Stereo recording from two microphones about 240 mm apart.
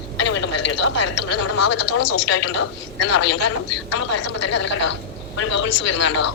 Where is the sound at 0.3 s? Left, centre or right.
Left.